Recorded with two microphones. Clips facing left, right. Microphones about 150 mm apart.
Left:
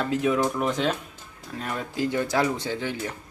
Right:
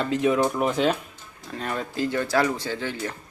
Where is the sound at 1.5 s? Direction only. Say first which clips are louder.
Right 2 dB; 5° left (ahead or behind).